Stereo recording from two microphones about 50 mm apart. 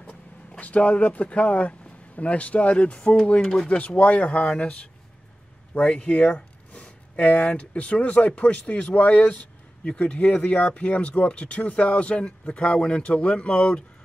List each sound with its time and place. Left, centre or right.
0.6 s speech: left
5.8 s speech: left